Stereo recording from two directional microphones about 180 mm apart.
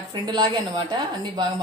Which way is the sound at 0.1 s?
25° right (ahead or behind).